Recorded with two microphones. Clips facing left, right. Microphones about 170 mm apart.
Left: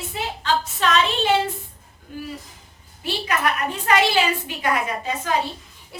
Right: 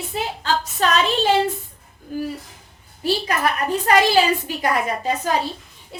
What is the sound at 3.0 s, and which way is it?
A woman's voice, 35° right (ahead or behind).